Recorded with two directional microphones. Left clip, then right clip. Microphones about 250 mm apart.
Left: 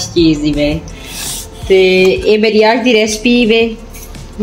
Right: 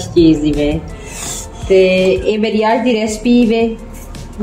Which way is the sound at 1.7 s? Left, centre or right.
Left.